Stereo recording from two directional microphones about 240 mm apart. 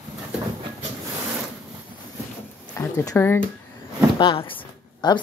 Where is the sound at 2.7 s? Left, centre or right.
Centre.